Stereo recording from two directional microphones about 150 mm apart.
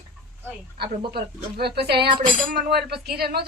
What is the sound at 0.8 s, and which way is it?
Speech, 90° right.